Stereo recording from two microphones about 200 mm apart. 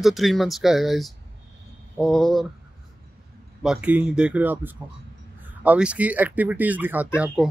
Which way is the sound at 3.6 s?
5° right (ahead or behind).